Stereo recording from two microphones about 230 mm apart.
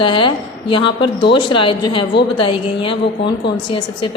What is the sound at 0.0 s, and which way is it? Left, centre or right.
A woman's voice, left.